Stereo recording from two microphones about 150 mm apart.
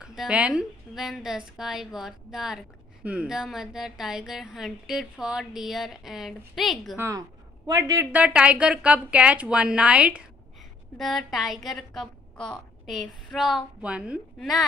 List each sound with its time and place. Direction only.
0.0 s a woman's voice: 5° right (ahead or behind)
7.0 s a woman's voice: 20° right (ahead or behind)
8.1 s a woman's voice: 10° right (ahead or behind)